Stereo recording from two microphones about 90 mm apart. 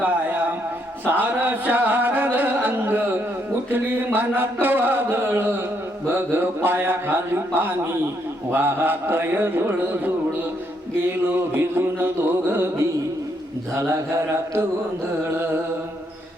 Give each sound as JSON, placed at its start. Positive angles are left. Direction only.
{"t": 0.0, "sound": "a sound", "side_deg": -20}
{"t": 1.0, "sound": "music", "side_deg": -20}
{"t": 11.3, "sound": "music", "side_deg": -25}